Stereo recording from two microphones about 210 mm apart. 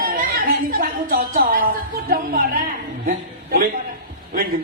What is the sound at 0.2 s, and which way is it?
Music, 45° right (ahead or behind).